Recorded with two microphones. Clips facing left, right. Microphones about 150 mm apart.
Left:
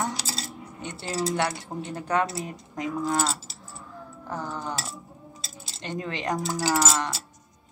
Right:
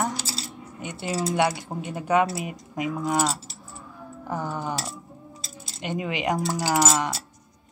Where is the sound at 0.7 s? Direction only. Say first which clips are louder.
Right 2 dB; 10° right (ahead or behind).